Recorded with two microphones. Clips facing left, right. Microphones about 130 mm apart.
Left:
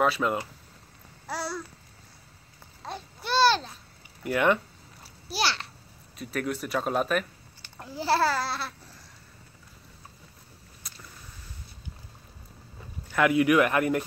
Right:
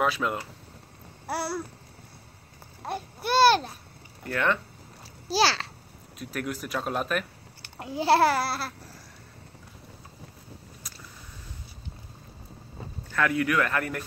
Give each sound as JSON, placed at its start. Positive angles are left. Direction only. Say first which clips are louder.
{"t": 0.0, "sound": "speech", "louder": "left 2 dB", "side_deg": 0}
{"t": 2.8, "sound": "babbling", "louder": "right 5 dB", "side_deg": -10}
{"t": 3.3, "sound": "speech", "louder": "right 3 dB", "side_deg": -50}
{"t": 4.2, "sound": "speech", "louder": "left 3 dB", "side_deg": 15}
{"t": 5.3, "sound": "a child's voice", "louder": "right 5 dB", "side_deg": -90}
{"t": 6.1, "sound": "speech", "louder": "left 2 dB", "side_deg": 0}
{"t": 7.9, "sound": "babbling", "louder": "right 4 dB", "side_deg": -15}
{"t": 13.1, "sound": "speech", "louder": "left 4 dB", "side_deg": 15}